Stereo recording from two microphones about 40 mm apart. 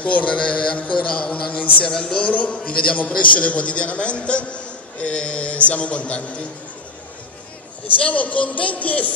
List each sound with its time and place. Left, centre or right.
0.0 s a man's voice: left
7.8 s a man's voice: left